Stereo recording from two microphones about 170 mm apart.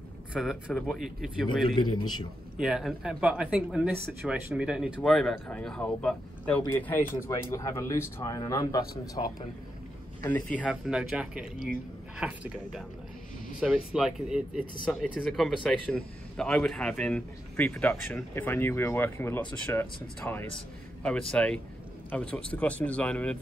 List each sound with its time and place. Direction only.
0.3 s speech: 5° right (ahead or behind)
1.8 s speech: 25° left (ahead or behind)
2.5 s speech: 5° right (ahead or behind); by 9.2 s 20° left (ahead or behind)
10.2 s speech: 10° left (ahead or behind)
10.7 s speech: 5° right (ahead or behind)
13.9 s speech: 5° right (ahead or behind)